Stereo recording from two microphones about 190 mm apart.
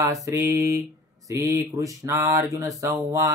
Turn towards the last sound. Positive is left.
turn(degrees=-15)  # may be behind; listen again after turning